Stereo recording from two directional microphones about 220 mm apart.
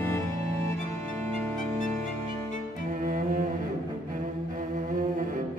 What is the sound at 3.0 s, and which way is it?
Cello, 40° right (ahead or behind).